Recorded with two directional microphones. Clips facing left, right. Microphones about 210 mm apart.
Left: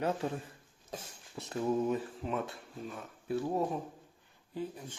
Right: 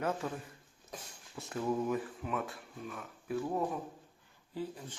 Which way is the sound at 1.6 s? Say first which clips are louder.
Left 2 dB; 20° left (ahead or behind).